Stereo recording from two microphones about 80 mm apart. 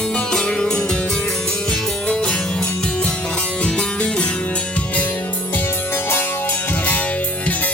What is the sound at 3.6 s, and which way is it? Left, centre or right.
Music, centre.